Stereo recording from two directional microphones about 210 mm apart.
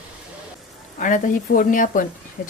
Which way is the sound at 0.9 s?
40° left (ahead or behind).